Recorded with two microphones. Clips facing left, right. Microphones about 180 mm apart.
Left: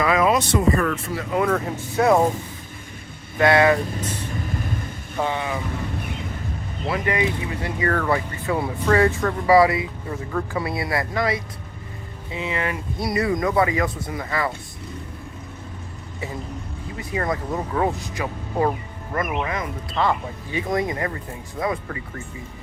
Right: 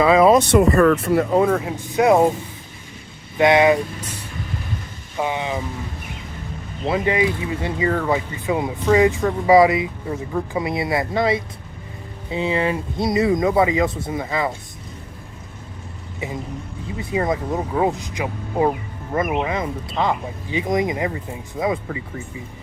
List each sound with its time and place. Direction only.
0.0 s a sound: 30° right (ahead or behind)
0.3 s speech: 65° right (ahead or behind)
1.5 s speech: 10° right (ahead or behind)
3.3 s speech: 20° right (ahead or behind)
5.1 s speech: 15° right (ahead or behind)
6.8 s speech: 25° right (ahead or behind)
17.1 s speech: 20° right (ahead or behind)